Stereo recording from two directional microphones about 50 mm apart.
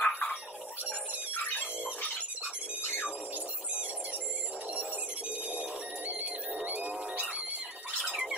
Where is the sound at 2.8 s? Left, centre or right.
Left.